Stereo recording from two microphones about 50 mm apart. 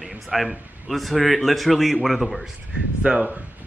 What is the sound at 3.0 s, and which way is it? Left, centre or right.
Speech, right.